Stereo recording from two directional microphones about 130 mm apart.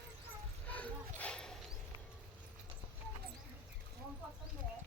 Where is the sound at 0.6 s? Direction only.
10° left (ahead or behind).